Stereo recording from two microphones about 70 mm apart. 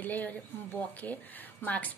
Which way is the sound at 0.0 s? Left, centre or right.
Left.